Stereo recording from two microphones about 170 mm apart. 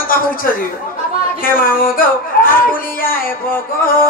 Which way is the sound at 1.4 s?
55° left (ahead or behind).